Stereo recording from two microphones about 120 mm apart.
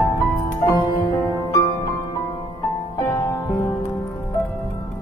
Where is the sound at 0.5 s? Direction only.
35° left (ahead or behind).